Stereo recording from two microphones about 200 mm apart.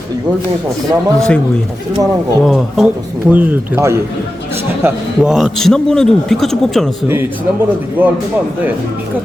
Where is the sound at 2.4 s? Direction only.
Centre (ahead or behind).